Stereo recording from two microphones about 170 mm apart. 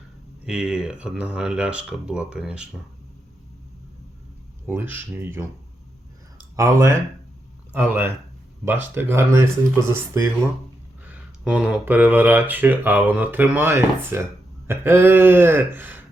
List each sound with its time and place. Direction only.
0.4 s speech: 5° right (ahead or behind)
4.6 s speech: 15° right (ahead or behind)
6.6 s speech: 20° right (ahead or behind)
9.0 s speech: 15° right (ahead or behind)